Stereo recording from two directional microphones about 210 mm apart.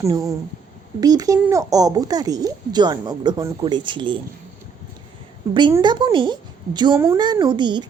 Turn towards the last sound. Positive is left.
turn(degrees=-20)  # may be behind; listen again after turning